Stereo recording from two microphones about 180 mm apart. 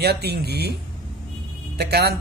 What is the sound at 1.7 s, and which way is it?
Speech, 60° right (ahead or behind).